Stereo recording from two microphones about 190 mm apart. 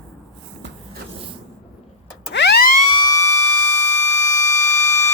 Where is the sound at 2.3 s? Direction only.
65° left (ahead or behind).